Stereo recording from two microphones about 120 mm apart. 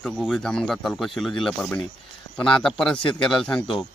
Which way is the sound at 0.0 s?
Centre (ahead or behind).